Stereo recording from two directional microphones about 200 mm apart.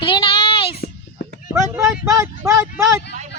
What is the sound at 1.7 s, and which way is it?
Speech, 15° right (ahead or behind).